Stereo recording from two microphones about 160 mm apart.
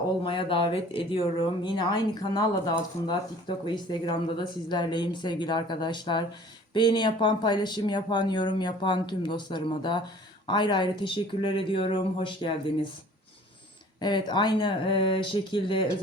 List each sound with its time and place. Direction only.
0.3 s speech: 35° left (ahead or behind)
14.0 s speech: 30° left (ahead or behind)